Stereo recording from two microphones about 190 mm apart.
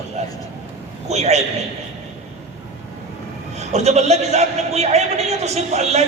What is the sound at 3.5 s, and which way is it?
A man's voice, 35° right (ahead or behind).